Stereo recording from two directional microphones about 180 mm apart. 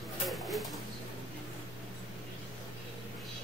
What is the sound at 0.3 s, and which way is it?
Pigeon, centre (ahead or behind).